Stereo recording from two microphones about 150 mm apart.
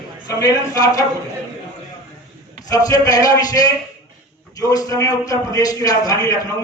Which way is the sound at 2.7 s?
25° left (ahead or behind).